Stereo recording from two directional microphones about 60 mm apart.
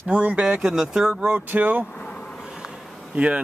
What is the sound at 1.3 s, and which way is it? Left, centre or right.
Speech, right.